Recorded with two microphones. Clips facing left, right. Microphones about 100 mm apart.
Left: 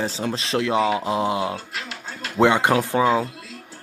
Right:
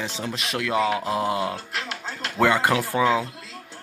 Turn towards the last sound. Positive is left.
turn(degrees=20)  # may be behind; listen again after turning